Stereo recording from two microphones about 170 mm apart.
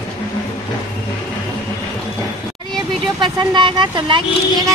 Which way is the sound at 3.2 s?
25° right (ahead or behind).